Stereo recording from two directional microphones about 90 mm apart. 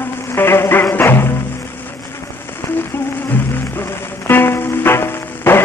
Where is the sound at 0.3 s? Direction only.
25° left (ahead or behind).